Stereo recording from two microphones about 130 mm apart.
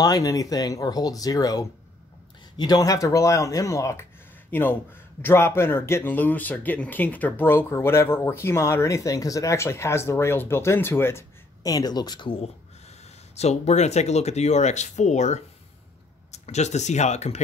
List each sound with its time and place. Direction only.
0.0 s speech: 30° left (ahead or behind)
13.4 s speech: 55° left (ahead or behind)